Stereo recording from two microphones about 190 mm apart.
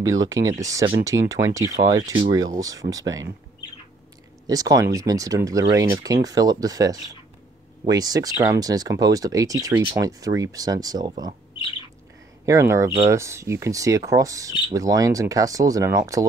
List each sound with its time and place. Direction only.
0.0 s speech: 15° right (ahead or behind)
4.5 s speech: 20° right (ahead or behind)
12.4 s speech: 15° right (ahead or behind)